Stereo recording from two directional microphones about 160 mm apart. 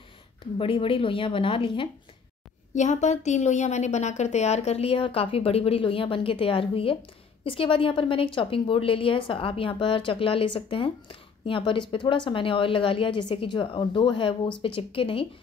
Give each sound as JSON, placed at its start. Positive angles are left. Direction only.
{"t": 0.6, "sound": "a woman's voice", "side_deg": 35}
{"t": 2.7, "sound": "a woman's voice", "side_deg": 50}